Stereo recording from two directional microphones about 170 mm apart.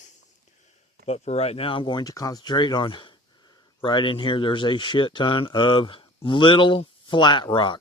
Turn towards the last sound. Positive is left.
turn(degrees=30)  # may be behind; listen again after turning